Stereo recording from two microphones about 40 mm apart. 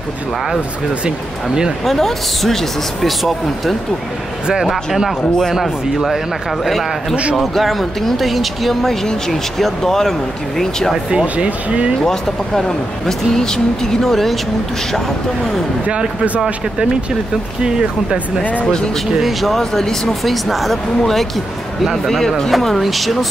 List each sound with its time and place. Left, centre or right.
1.9 s speech: centre
11.3 s speech: right
12.0 s speech: centre
19.2 s speech: centre